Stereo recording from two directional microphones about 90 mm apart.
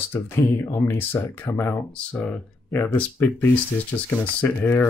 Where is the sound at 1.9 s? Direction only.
15° left (ahead or behind).